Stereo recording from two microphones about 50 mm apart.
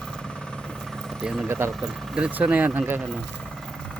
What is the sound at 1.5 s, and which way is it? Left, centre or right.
Speech, right.